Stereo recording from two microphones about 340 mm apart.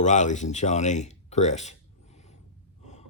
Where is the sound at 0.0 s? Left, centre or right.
Left.